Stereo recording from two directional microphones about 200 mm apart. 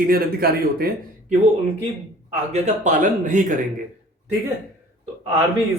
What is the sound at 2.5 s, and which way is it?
Speech, 40° right (ahead or behind).